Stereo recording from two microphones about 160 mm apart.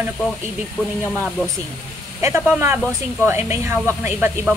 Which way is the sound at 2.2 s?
15° right (ahead or behind).